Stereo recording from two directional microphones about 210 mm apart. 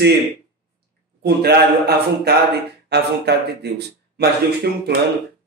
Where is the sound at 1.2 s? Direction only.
50° right (ahead or behind).